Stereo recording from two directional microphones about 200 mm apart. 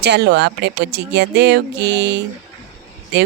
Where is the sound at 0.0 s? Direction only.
55° right (ahead or behind).